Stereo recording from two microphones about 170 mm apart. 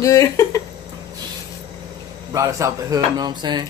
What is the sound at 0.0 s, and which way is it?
Speech, 20° left (ahead or behind).